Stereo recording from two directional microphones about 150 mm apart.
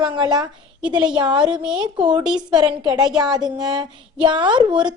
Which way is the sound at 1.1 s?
30° right (ahead or behind).